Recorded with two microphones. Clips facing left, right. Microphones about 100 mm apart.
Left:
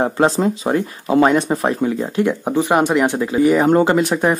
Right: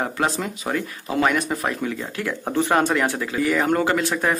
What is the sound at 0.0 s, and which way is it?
Speech, 30° left (ahead or behind).